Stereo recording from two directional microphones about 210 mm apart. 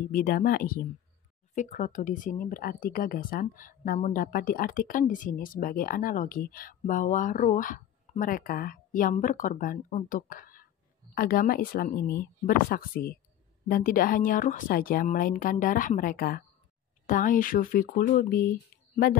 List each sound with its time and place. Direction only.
0.1 s speech: 45° left (ahead or behind)